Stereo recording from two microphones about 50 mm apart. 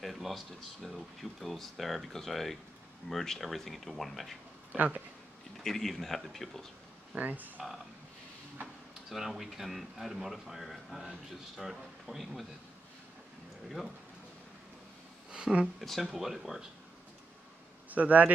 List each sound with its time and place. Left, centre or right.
0.0 s a sound: centre
0.8 s speech: centre
4.7 s speech: right
5.6 s speech: centre
7.2 s speech: right
9.1 s speech: centre
15.3 s a sound: centre
15.8 s speech: centre
17.8 s speech: right